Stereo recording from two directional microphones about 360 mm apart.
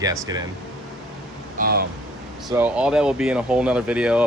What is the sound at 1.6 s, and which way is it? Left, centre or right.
Speech, right.